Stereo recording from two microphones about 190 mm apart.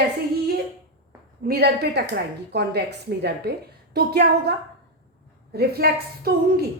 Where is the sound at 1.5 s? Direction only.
55° right (ahead or behind).